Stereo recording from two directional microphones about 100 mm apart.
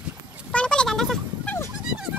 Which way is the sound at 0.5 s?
10° left (ahead or behind).